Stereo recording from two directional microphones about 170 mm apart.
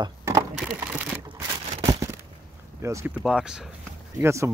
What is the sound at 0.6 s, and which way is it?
Speech, 10° right (ahead or behind).